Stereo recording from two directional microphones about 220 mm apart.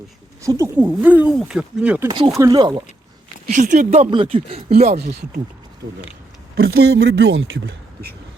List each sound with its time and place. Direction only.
0.4 s speech: 15° right (ahead or behind)
2.0 s speech: 20° right (ahead or behind)
3.4 s speech: 35° right (ahead or behind)
6.6 s speech: 45° right (ahead or behind)